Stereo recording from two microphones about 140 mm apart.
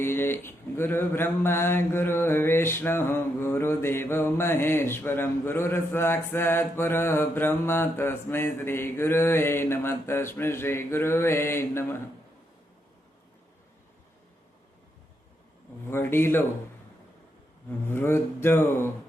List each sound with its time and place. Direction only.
0.0 s speech: 15° left (ahead or behind)
15.9 s speech: 15° left (ahead or behind)
17.7 s speech: 15° left (ahead or behind)